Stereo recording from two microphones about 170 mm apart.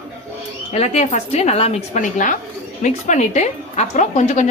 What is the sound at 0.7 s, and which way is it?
A woman's voice, 40° left (ahead or behind).